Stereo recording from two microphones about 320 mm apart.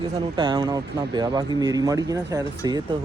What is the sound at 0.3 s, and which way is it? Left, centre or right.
Speech, centre.